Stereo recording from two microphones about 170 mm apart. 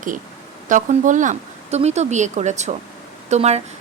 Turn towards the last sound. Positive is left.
turn(degrees=-40)  # may be behind; listen again after turning